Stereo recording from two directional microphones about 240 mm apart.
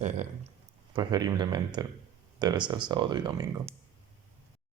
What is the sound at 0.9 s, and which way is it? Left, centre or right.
Speech, centre.